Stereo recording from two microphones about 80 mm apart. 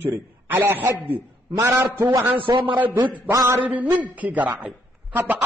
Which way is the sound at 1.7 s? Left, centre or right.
Right.